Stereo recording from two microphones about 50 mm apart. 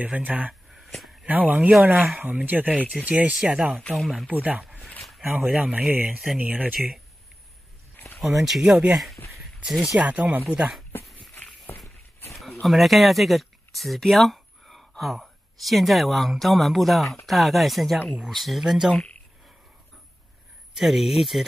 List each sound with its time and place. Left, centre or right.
0.0 s speech: right
0.7 s a sound: centre
1.2 s speech: right
8.4 s speech: centre
9.9 s speech: right
12.4 s speech: centre
20.7 s speech: centre